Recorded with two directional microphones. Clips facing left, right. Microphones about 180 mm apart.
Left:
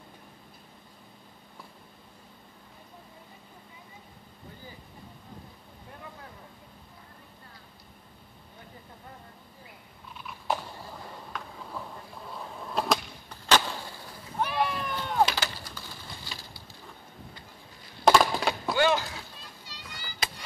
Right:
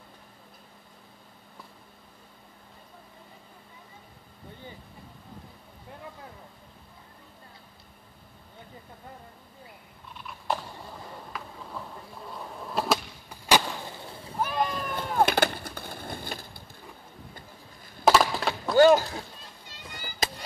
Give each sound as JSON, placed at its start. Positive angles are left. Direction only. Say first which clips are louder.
{"t": 10.1, "sound": "a sound", "louder": "even", "side_deg": 0}
{"t": 12.3, "sound": "skateboard", "louder": "right 1 dB", "side_deg": 0}
{"t": 14.4, "sound": "chop", "louder": "even", "side_deg": 5}
{"t": 15.2, "sound": "bird", "louder": "right 7 dB", "side_deg": -55}
{"t": 18.0, "sound": "a sound", "louder": "even", "side_deg": -5}
{"t": 18.8, "sound": "chop", "louder": "right 9 dB", "side_deg": -40}
{"t": 19.7, "sound": "music", "louder": "right 4 dB", "side_deg": -50}